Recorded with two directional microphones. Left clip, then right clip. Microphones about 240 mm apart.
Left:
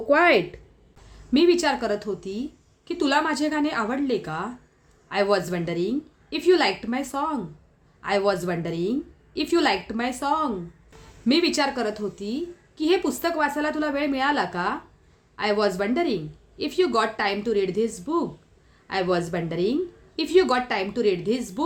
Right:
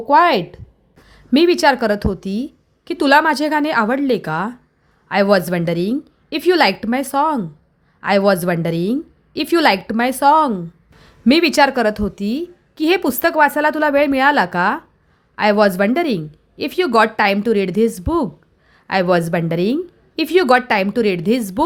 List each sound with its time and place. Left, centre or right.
0.1 s a woman's voice: right